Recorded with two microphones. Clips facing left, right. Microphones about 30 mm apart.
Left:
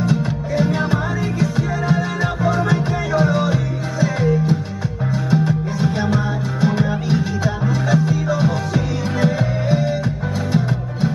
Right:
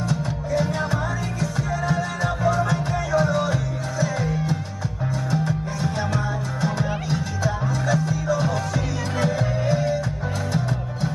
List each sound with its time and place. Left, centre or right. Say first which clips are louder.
0.0 s music: left 6 dB; centre